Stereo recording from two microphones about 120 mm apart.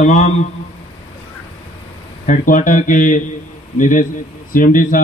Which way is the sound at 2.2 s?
90° left.